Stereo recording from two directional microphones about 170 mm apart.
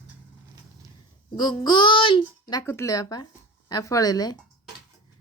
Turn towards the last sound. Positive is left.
turn(degrees=20)  # may be behind; listen again after turning